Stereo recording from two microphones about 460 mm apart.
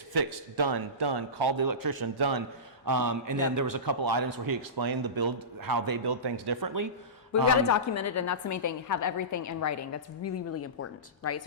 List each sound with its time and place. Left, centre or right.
0.1 s a man's voice: right
7.7 s a woman's voice: left